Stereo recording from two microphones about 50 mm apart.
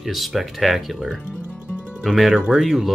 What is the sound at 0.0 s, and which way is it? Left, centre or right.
Speech, centre.